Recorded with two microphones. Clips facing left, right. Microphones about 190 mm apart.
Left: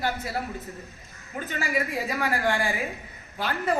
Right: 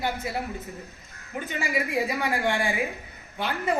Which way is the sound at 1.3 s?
15° right (ahead or behind).